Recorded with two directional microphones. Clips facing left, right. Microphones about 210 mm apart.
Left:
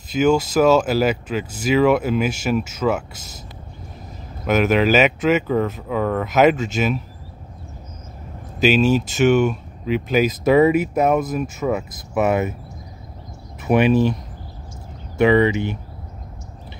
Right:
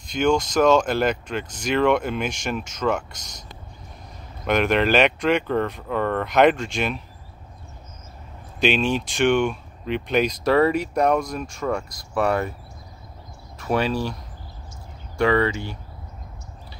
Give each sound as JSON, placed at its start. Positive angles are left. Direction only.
{"t": 0.1, "sound": "speech", "side_deg": 5}
{"t": 4.5, "sound": "speech", "side_deg": 5}
{"t": 8.5, "sound": "speech", "side_deg": 5}
{"t": 12.1, "sound": "speech", "side_deg": 20}
{"t": 13.6, "sound": "speech", "side_deg": 20}
{"t": 15.1, "sound": "speech", "side_deg": 20}